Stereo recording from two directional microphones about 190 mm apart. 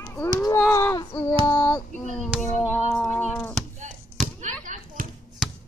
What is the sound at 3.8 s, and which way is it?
Basketball bounce, 40° right (ahead or behind).